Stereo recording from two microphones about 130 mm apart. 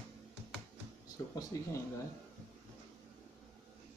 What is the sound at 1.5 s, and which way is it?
Speech, 25° left (ahead or behind).